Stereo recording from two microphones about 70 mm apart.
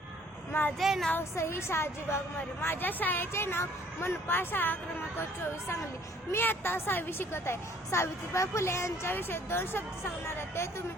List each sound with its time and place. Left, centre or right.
0.8 s speech: centre
1.1 s a woman's voice: left
6.3 s a woman's voice: left